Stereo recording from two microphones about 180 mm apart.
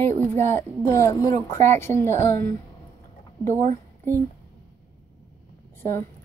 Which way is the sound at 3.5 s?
45° right (ahead or behind).